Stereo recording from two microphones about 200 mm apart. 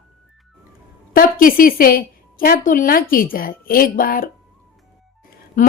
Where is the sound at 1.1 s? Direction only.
45° left (ahead or behind).